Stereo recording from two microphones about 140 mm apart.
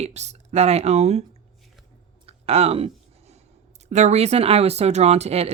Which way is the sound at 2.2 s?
45° right (ahead or behind).